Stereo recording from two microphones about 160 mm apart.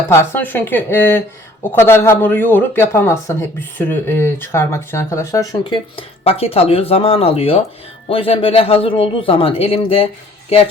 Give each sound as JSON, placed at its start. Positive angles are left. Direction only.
{"t": 0.1, "sound": "speech", "side_deg": 15}
{"t": 6.0, "sound": "speech", "side_deg": 40}